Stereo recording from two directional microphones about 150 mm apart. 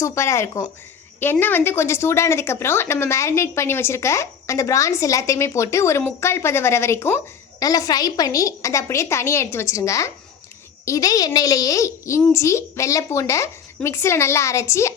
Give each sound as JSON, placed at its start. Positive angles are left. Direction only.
{"t": 0.0, "sound": "a woman's voice", "side_deg": 20}